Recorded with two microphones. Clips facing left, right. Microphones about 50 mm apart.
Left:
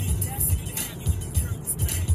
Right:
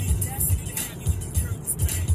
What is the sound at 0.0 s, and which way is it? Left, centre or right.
Music, right.